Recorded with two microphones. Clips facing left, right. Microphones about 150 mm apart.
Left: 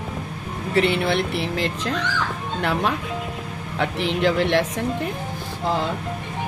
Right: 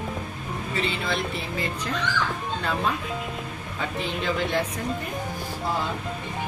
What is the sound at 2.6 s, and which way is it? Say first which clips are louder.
Speech: left 5 dB; 70° left (ahead or behind).